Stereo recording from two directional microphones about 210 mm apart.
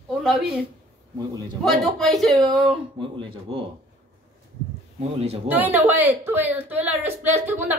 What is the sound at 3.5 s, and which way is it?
Speech, 25° right (ahead or behind).